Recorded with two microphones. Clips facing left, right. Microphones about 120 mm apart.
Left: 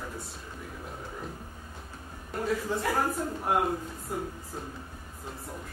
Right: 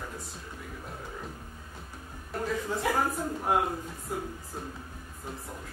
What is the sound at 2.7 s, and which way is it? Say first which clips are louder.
Speech: left 1 dB; centre (ahead or behind).